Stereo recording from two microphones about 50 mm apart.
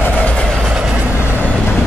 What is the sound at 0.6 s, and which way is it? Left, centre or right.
Train, centre.